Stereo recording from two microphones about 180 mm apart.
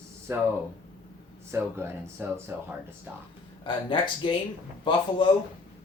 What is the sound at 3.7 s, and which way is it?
Speech, 25° left (ahead or behind).